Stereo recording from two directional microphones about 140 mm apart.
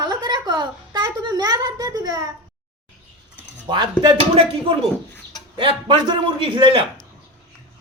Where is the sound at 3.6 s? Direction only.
35° right (ahead or behind).